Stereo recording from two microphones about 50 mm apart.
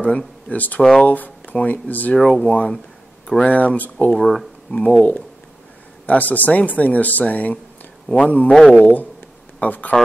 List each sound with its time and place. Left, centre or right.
0.5 s speech: left
2.1 s speech: centre
2.4 s speech: left
4.1 s speech: centre
4.6 s speech: centre
6.0 s speech: left